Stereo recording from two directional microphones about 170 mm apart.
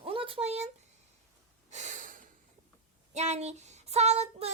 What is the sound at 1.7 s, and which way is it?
Snort, 45° right (ahead or behind).